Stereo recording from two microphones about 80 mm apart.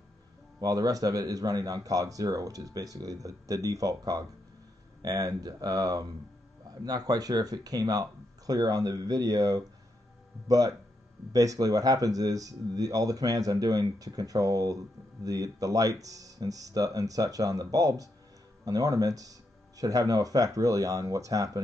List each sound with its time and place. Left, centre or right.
0.6 s speech: right